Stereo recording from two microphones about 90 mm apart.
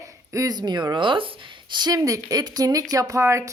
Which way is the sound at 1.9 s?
40° right (ahead or behind).